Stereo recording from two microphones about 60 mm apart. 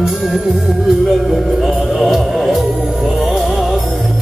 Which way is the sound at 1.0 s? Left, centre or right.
Centre.